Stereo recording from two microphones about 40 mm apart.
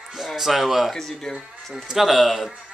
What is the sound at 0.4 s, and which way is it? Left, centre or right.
Speech, centre.